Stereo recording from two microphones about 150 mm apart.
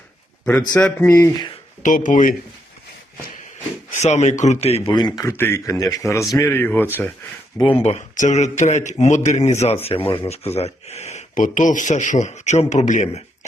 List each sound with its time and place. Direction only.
0.4 s a man's voice: 10° left (ahead or behind)
1.8 s speech: 60° left (ahead or behind)
3.9 s speech: 50° left (ahead or behind)
4.9 s speech: 30° left (ahead or behind)
5.2 s a man's voice: 15° left (ahead or behind)
7.7 s speech: 45° left (ahead or behind)